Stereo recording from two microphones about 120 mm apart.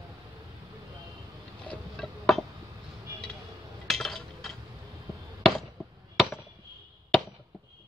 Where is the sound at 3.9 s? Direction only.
5° left (ahead or behind).